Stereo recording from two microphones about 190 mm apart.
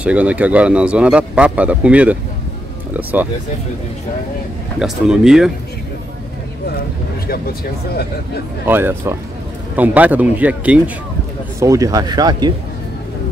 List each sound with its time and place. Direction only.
0.0 s speech: 5° right (ahead or behind)
4.7 s speech: 5° right (ahead or behind)
8.6 s speech: 10° right (ahead or behind)
11.6 s speech: 20° right (ahead or behind)